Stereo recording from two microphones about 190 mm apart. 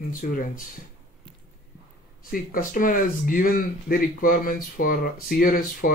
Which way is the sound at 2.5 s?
45° left (ahead or behind).